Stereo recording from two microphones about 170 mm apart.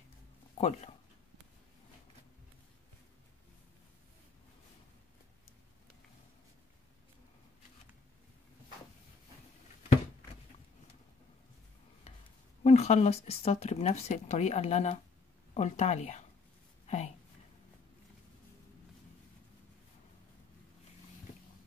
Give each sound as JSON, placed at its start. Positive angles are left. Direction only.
{"t": 0.6, "sound": "speech", "side_deg": 40}
{"t": 12.6, "sound": "speech", "side_deg": 40}
{"t": 16.8, "sound": "a sound", "side_deg": 45}